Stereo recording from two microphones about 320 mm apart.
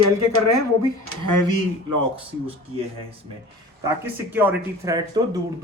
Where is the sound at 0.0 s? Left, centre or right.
Right.